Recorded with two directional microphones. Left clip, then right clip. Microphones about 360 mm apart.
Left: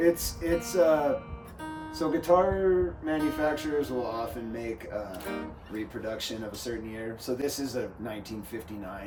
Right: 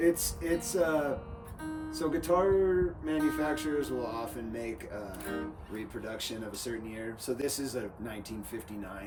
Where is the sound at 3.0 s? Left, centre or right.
Centre.